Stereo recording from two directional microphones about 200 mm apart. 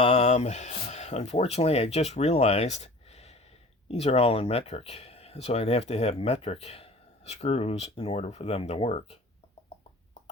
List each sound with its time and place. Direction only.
0.0 s speech: 35° left (ahead or behind)